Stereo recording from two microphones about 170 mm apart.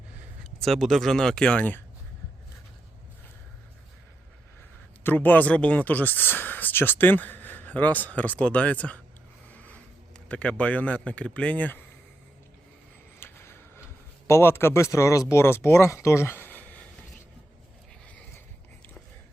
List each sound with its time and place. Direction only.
0.6 s speech: centre (ahead or behind)
5.0 s speech: 10° left (ahead or behind)
9.5 s a sound: 10° left (ahead or behind)
10.2 s speech: 5° left (ahead or behind)
13.1 s a sound: 15° left (ahead or behind)
14.3 s speech: 15° left (ahead or behind)